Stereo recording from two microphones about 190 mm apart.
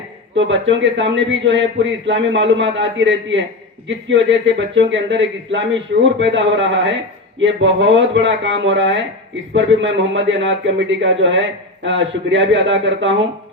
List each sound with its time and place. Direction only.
0.3 s a man's voice: 75° right (ahead or behind)